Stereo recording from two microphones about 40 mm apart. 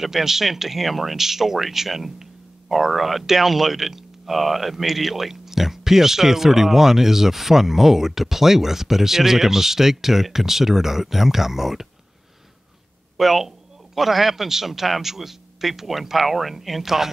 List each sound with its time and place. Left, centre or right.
0.0 s speech: centre
13.2 s speech: centre